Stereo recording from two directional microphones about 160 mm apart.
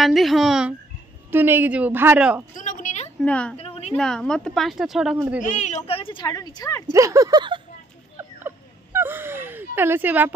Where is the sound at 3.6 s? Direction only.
40° left (ahead or behind).